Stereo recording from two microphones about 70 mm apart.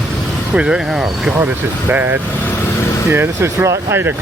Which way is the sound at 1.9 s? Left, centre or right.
Right.